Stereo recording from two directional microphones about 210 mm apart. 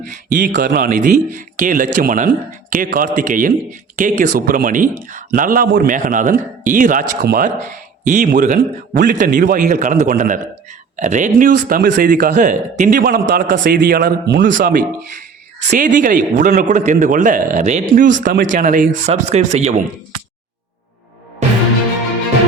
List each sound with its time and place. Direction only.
0.1 s speech: 40° right (ahead or behind)
14.5 s speech: 40° right (ahead or behind)